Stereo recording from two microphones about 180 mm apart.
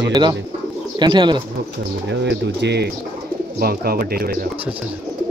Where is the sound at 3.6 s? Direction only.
55° right (ahead or behind).